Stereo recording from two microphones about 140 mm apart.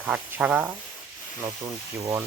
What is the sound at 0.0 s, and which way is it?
Speech, 15° right (ahead or behind).